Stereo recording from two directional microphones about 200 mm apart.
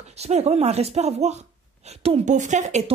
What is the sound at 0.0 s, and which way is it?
Speech, 35° right (ahead or behind).